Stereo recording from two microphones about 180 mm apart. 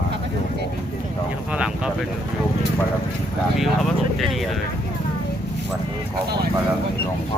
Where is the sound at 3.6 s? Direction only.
Centre (ahead or behind).